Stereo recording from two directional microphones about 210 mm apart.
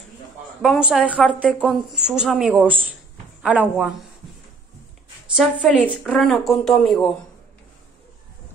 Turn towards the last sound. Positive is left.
turn(degrees=0)  # may be behind; listen again after turning